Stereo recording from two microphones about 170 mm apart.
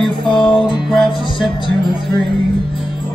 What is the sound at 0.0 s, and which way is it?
Music, 5° left (ahead or behind).